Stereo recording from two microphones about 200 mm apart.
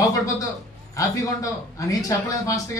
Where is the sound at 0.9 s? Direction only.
15° left (ahead or behind).